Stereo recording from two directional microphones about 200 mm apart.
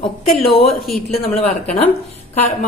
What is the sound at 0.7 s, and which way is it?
Speech, centre (ahead or behind).